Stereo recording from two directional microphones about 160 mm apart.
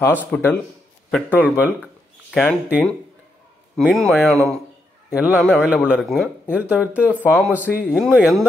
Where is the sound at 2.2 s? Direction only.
5° left (ahead or behind).